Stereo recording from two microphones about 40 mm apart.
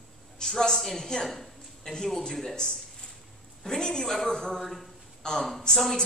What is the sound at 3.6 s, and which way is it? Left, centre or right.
A man's voice, centre.